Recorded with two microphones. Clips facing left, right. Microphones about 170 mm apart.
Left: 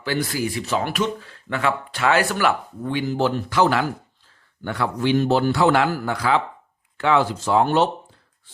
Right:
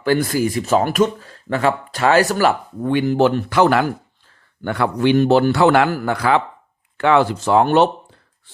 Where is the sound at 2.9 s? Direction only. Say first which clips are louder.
Right 6 dB; 60° right (ahead or behind).